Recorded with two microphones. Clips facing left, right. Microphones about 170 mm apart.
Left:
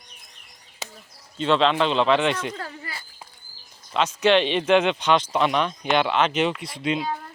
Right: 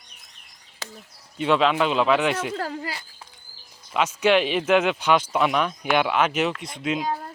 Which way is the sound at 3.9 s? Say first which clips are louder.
Left 1 dB; 10° right (ahead or behind).